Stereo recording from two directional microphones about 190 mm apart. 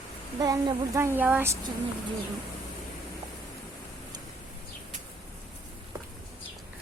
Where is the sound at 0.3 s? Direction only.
20° right (ahead or behind).